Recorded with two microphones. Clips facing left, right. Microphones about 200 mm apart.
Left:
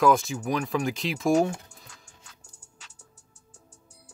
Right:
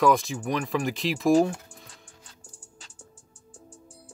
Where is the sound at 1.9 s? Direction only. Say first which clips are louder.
Right 2 dB; 30° right (ahead or behind).